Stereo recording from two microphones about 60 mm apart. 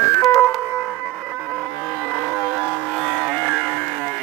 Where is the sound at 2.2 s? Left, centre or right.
Centre.